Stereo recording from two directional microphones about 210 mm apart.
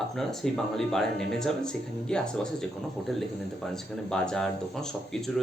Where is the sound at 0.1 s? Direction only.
Centre (ahead or behind).